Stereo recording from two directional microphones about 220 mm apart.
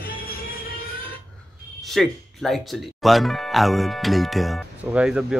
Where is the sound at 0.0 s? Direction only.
40° left (ahead or behind).